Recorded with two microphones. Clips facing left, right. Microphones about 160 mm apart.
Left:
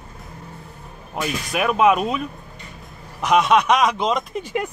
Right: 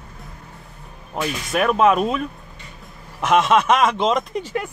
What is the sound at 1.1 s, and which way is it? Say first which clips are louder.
Speech: right 2 dB; 5° left (ahead or behind).